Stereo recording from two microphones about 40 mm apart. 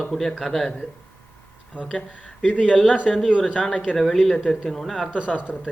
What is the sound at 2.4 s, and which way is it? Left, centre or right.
Speech, left.